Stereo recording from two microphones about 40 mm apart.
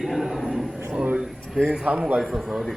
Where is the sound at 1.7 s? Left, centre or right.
Right.